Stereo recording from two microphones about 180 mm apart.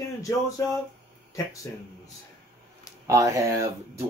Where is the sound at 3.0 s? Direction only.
15° right (ahead or behind).